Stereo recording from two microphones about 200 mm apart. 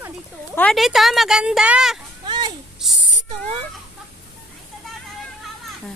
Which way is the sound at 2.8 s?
Centre (ahead or behind).